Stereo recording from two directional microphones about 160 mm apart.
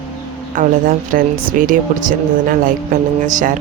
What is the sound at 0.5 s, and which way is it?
Speech, 55° right (ahead or behind).